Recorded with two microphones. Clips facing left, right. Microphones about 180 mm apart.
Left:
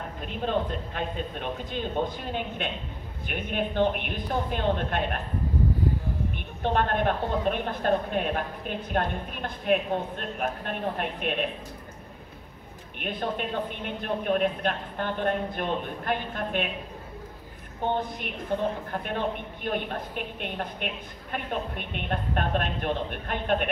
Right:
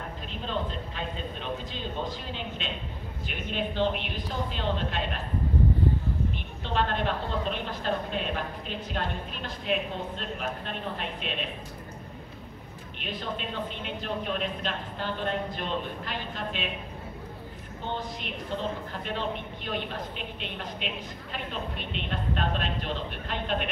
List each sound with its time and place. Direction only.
0.3 s a woman's voice: 55° left (ahead or behind)
6.6 s a woman's voice: 55° left (ahead or behind)
13.0 s a woman's voice: 55° left (ahead or behind)
17.9 s a woman's voice: 55° left (ahead or behind)